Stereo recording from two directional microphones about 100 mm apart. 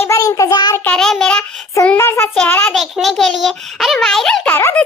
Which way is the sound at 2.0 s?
25° left (ahead or behind).